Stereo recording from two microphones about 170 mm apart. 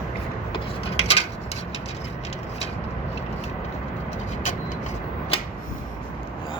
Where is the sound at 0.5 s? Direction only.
35° left (ahead or behind).